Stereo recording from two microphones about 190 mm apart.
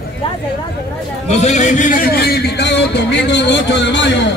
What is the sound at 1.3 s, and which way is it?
A man's voice, 35° left (ahead or behind).